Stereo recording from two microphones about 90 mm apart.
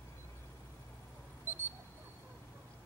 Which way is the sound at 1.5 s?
25° right (ahead or behind).